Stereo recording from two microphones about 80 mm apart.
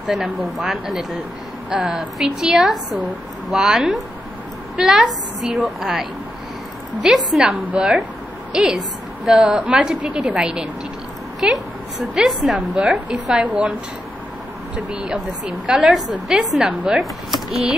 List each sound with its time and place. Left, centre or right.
0.0 s a woman's voice: centre
9.2 s a woman's voice: centre
12.5 s a woman's voice: centre
14.9 s a woman's voice: centre